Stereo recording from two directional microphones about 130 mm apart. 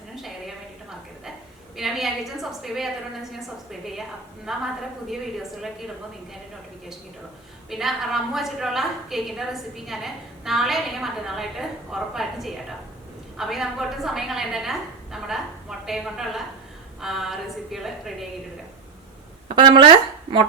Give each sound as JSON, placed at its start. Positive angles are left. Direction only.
{"t": 0.2, "sound": "a sound", "side_deg": 0}
{"t": 1.7, "sound": "a woman's voice", "side_deg": 0}
{"t": 7.7, "sound": "a woman's voice", "side_deg": 0}
{"t": 19.5, "sound": "speech", "side_deg": -40}